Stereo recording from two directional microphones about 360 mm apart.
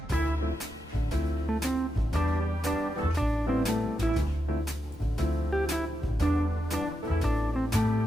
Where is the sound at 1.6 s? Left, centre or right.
Centre.